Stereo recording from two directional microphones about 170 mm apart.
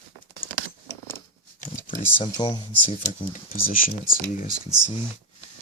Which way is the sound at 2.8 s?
45° left (ahead or behind).